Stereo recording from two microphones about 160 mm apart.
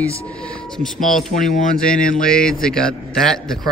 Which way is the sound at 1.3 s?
55° left (ahead or behind).